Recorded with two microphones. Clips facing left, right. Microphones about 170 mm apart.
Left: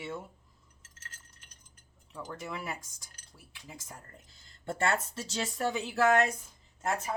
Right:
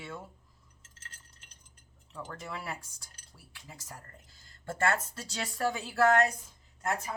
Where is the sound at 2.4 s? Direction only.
15° left (ahead or behind).